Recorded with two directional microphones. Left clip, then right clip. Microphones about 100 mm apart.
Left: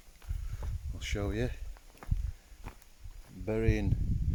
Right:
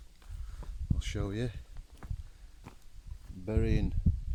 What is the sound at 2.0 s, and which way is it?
Walk, centre (ahead or behind).